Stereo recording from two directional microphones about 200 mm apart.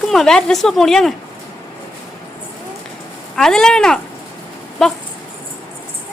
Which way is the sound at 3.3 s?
5° left (ahead or behind).